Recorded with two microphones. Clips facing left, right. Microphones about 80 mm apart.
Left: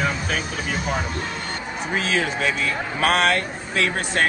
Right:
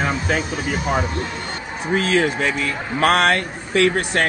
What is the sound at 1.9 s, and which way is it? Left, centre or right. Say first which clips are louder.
Speech: right 5 dB; right.